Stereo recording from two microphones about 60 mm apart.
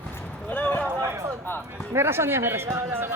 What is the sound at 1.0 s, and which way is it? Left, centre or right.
Speech, right.